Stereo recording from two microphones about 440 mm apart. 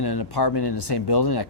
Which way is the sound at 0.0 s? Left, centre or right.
Left.